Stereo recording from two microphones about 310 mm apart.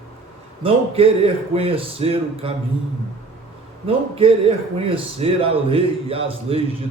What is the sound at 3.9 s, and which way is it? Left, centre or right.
Speech, centre.